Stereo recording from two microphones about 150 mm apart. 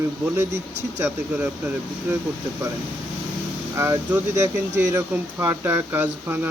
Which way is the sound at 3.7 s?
20° right (ahead or behind).